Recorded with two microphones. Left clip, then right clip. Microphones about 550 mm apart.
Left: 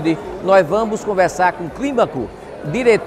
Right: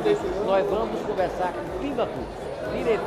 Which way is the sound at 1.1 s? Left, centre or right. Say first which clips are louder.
Left 12 dB; left.